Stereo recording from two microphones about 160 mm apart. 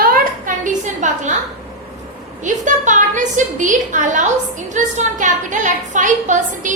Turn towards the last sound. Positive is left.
turn(degrees=-50)  # may be behind; listen again after turning